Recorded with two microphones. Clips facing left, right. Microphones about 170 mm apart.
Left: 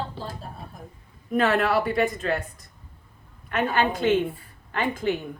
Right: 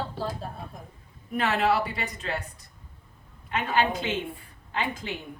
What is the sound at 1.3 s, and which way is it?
Speech, 50° left (ahead or behind).